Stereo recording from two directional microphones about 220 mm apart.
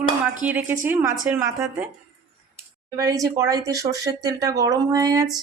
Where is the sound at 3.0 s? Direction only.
15° right (ahead or behind).